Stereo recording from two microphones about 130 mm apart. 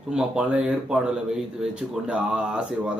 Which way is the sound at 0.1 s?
5° right (ahead or behind).